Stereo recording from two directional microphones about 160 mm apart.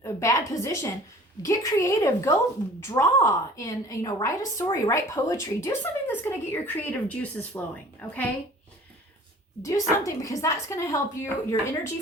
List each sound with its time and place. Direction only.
0.0 s a woman's voice: 20° left (ahead or behind)
9.6 s a woman's voice: 20° left (ahead or behind)